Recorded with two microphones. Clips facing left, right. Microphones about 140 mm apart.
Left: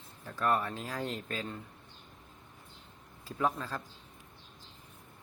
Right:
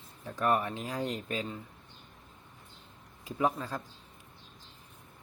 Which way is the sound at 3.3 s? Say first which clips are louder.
Right 2 dB; 15° right (ahead or behind).